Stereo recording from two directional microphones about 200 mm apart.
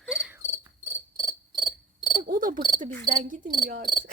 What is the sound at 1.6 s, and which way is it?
Insect, centre (ahead or behind).